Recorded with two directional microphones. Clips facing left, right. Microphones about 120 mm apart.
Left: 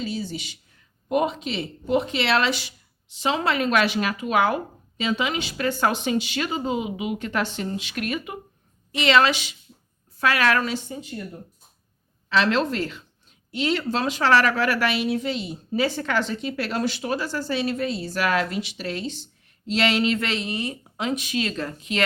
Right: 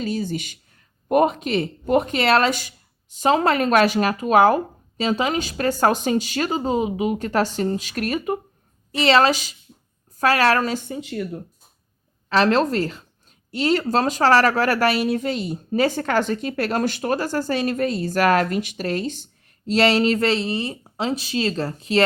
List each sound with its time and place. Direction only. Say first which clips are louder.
0.0 s a woman's voice: right 4 dB; 50° right (ahead or behind)
10.8 s speech: right 6 dB; 80° right
12.3 s a woman's voice: right 4 dB; 40° right (ahead or behind)